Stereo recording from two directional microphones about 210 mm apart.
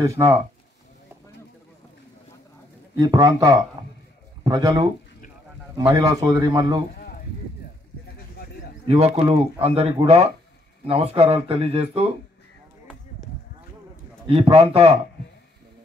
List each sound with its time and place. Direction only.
0.0 s a man's voice: 15° right (ahead or behind)
3.0 s a man's voice: 15° right (ahead or behind)
8.8 s speech: 30° right (ahead or behind)
14.2 s speech: 25° right (ahead or behind)